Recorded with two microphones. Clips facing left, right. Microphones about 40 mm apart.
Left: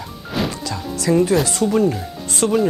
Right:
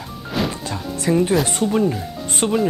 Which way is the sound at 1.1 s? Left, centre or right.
Right.